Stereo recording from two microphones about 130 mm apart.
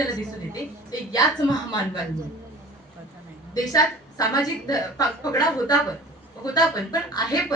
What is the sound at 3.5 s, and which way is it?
A woman's voice, 30° left (ahead or behind).